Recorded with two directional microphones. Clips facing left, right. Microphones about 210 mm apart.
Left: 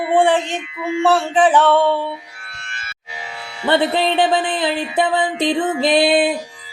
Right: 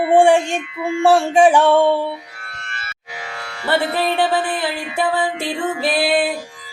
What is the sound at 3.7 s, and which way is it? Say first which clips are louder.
Music: left 2 dB; 20° left (ahead or behind).